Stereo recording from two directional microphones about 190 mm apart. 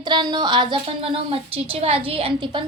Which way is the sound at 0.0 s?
25° right (ahead or behind).